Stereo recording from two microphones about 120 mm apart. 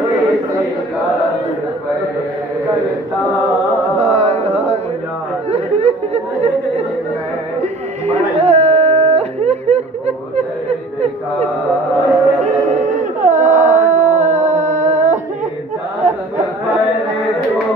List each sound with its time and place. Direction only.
4.0 s carnatic music: 65° right (ahead or behind)
5.5 s chatter: 65° right (ahead or behind)
8.1 s a sound: 65° right (ahead or behind)
12.4 s dog: 75° right (ahead or behind)
14.6 s humming: 85° right
16.0 s a sound: 80° right